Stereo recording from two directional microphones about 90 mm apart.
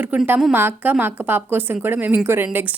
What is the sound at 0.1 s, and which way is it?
A woman's voice, 20° right (ahead or behind).